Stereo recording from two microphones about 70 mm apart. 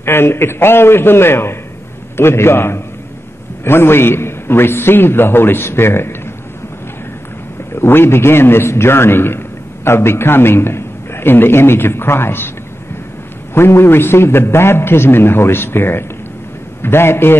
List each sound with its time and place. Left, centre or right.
0.0 s a man's voice: left
7.7 s a man's voice: left
13.6 s a man's voice: left